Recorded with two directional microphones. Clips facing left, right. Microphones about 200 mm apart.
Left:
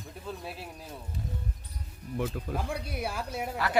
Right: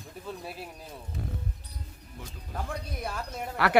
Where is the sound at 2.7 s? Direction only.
10° left (ahead or behind).